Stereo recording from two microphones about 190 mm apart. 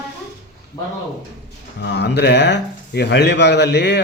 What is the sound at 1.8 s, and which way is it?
Speech, 65° left (ahead or behind).